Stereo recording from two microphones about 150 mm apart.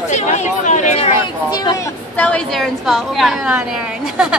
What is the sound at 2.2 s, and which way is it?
A woman's voice, 5° left (ahead or behind).